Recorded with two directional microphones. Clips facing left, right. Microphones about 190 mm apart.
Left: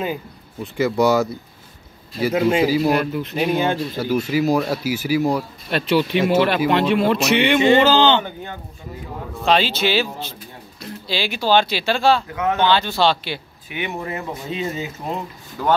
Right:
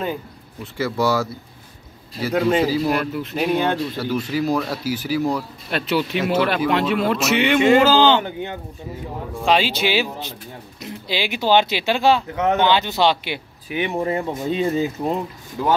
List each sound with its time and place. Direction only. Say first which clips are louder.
0.7 s speech: left 4 dB; 20° left (ahead or behind)
5.7 s a man's voice: left 3 dB; centre (ahead or behind)
9.3 s speech: even; 10° right (ahead or behind)
13.7 s speech: right 5 dB; 35° right (ahead or behind)